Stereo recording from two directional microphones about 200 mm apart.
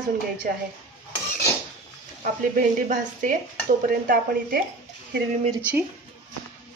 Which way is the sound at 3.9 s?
45° right (ahead or behind).